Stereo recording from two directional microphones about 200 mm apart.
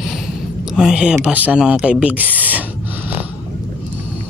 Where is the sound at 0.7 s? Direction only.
5° right (ahead or behind).